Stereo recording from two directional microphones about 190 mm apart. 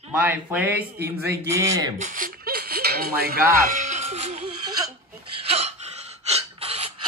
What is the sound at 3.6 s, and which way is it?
Music, 40° right (ahead or behind).